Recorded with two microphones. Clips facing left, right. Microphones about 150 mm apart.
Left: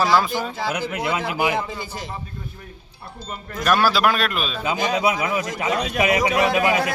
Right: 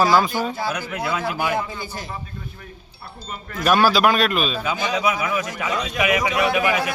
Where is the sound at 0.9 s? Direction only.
20° left (ahead or behind).